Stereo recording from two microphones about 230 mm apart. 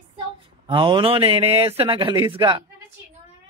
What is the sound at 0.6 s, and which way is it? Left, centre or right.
Speech, right.